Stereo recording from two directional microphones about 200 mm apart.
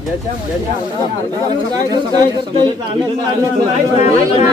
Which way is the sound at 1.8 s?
20° right (ahead or behind).